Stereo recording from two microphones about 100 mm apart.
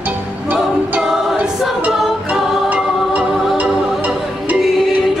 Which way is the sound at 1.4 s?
15° right (ahead or behind).